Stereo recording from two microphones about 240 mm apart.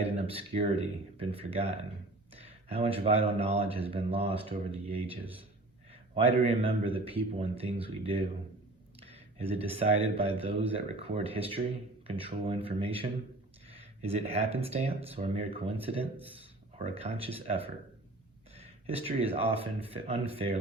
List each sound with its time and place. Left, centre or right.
0.0 s speech: right
5.2 s a man's voice: centre
5.9 s speech: right